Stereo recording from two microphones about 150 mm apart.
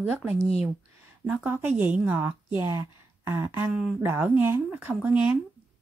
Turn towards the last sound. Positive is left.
turn(degrees=-10)  # may be behind; listen again after turning